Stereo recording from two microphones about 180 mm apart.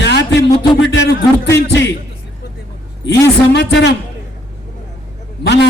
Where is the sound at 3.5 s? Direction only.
80° left.